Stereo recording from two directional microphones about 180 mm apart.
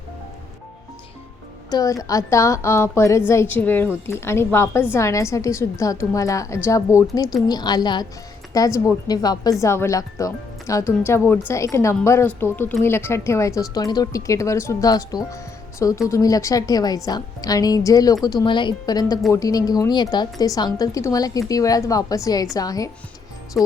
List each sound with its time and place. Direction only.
1.7 s a woman's voice: 20° left (ahead or behind)
23.6 s speech: centre (ahead or behind)